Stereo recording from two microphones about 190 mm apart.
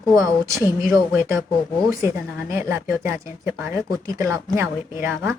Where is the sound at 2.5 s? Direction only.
15° right (ahead or behind).